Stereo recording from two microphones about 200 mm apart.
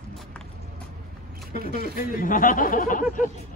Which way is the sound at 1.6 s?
50° right (ahead or behind).